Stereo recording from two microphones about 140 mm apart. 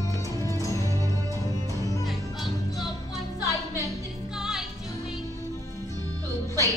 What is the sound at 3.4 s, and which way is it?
Music, 25° left (ahead or behind).